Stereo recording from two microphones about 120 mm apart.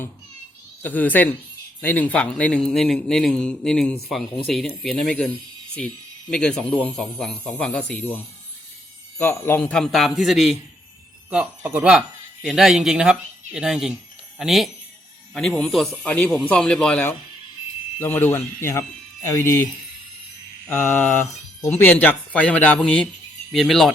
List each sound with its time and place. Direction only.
0.8 s a man's voice: 15° left (ahead or behind)
6.3 s a man's voice: 5° left (ahead or behind)
18.0 s speech: 20° left (ahead or behind)
20.7 s mantra: 20° left (ahead or behind)
21.8 s a man's voice: 15° left (ahead or behind)